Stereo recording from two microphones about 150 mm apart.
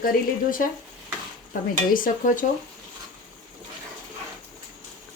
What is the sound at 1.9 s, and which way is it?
Speech, 65° left (ahead or behind).